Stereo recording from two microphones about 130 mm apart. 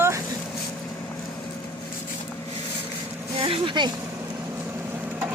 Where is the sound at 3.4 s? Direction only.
40° right (ahead or behind).